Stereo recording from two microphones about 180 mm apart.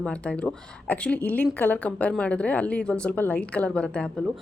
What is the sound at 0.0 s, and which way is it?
A woman's voice, 5° left (ahead or behind).